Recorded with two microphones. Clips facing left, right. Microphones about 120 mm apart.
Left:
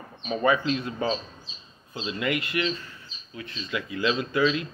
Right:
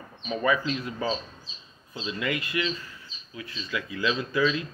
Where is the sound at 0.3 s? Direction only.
30° left (ahead or behind).